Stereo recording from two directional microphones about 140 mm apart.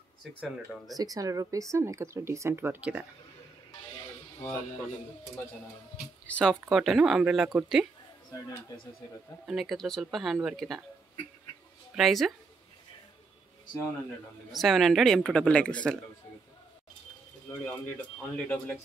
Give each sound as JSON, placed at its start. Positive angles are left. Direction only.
{"t": 0.9, "sound": "speech", "side_deg": -25}
{"t": 6.2, "sound": "speech", "side_deg": 10}
{"t": 9.5, "sound": "speech", "side_deg": 0}
{"t": 11.9, "sound": "speech", "side_deg": 0}
{"t": 14.5, "sound": "speech", "side_deg": 0}
{"t": 17.5, "sound": "speech", "side_deg": 15}